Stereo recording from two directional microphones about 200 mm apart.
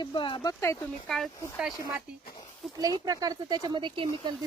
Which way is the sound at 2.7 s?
20° right (ahead or behind).